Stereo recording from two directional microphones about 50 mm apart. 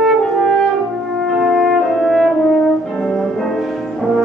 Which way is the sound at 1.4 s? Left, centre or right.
Centre.